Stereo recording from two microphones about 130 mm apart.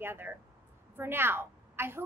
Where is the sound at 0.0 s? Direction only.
15° right (ahead or behind).